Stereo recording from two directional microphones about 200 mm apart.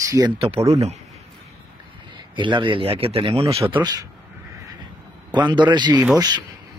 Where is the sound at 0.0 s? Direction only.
15° right (ahead or behind).